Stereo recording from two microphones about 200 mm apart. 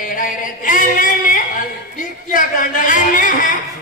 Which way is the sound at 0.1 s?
45° left (ahead or behind).